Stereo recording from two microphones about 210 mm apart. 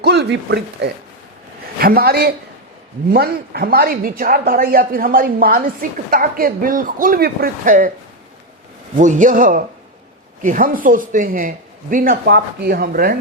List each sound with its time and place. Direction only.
0.0 s a woman's voice: 55° right (ahead or behind); by 7.9 s 40° right (ahead or behind)
9.0 s speech: 35° right (ahead or behind)